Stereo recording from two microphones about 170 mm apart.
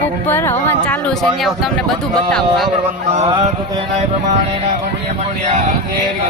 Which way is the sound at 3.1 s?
40° right (ahead or behind).